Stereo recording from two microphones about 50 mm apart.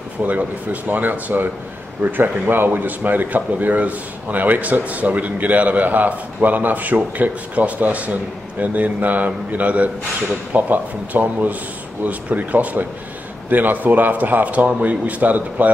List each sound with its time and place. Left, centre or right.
0.3 s speech: right